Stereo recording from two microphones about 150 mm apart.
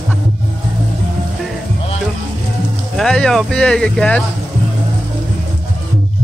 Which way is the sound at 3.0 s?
5° left (ahead or behind).